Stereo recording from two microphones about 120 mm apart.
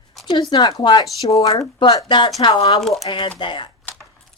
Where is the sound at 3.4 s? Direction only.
40° left (ahead or behind).